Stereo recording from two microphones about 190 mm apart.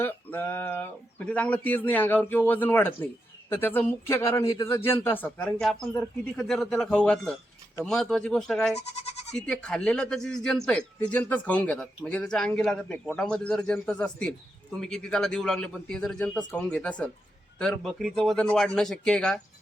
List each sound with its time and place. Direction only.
0.0 s speech: 10° left (ahead or behind)
9.0 s bleat: 35° left (ahead or behind)
9.3 s speech: 5° left (ahead or behind)